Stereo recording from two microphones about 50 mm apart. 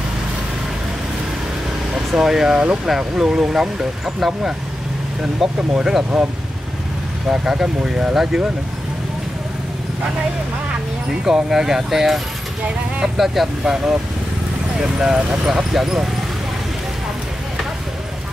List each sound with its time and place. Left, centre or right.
2.1 s speech: centre
2.6 s speech: right
2.9 s speech: centre
5.6 s speech: centre
7.2 s speech: centre
11.2 s speech: centre
13.2 s speech: centre